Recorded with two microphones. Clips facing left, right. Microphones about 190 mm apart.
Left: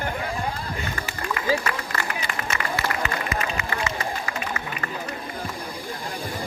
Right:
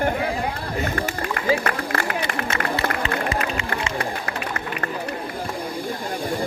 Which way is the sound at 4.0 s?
60° right (ahead or behind).